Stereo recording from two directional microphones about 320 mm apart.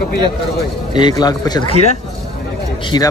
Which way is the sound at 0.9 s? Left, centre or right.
Centre.